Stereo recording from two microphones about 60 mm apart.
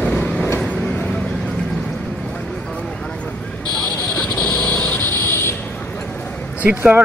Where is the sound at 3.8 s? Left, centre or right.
Left.